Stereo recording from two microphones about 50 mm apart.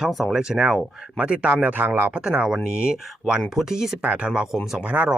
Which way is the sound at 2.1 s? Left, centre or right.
Centre.